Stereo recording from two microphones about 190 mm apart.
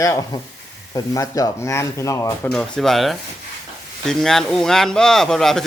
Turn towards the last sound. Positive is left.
turn(degrees=0)  # may be behind; listen again after turning